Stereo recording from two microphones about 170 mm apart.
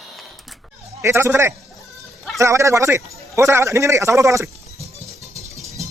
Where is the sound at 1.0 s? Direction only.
15° right (ahead or behind).